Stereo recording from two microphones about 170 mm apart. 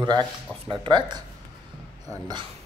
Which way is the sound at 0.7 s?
25° right (ahead or behind).